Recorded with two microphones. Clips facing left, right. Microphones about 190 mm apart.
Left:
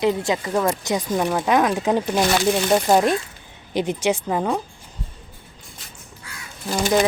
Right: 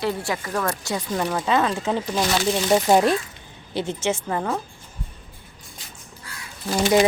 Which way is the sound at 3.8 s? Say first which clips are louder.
Left 3 dB; 15° left (ahead or behind).